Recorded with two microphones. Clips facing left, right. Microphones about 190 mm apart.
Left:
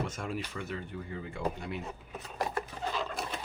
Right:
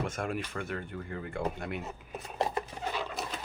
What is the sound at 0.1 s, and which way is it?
Speech, 55° right (ahead or behind).